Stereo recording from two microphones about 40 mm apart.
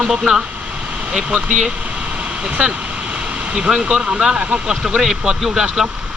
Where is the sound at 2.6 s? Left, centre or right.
Right.